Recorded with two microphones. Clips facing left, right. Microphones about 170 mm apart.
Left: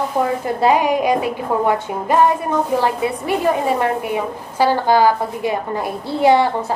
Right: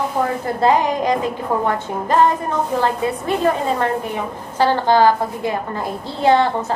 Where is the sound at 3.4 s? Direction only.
15° left (ahead or behind).